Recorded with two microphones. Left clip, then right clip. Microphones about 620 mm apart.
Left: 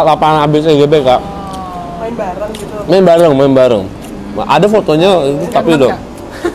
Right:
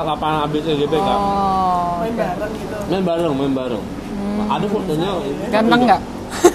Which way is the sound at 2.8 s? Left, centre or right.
Left.